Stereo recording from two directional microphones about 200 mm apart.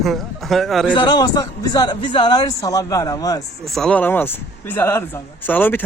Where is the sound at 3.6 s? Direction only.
Centre (ahead or behind).